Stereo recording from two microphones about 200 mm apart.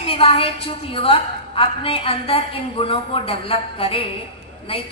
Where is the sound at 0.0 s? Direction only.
30° left (ahead or behind).